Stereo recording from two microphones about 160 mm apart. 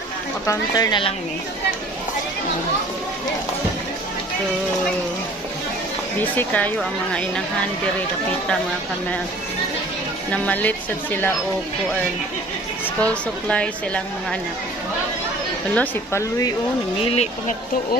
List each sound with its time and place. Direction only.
0.5 s speech: 25° left (ahead or behind)
6.1 s speech: 10° left (ahead or behind)
10.3 s speech: 10° left (ahead or behind)
13.0 s speech: 5° left (ahead or behind)
15.7 s speech: 15° left (ahead or behind)
17.0 s speech: 40° left (ahead or behind)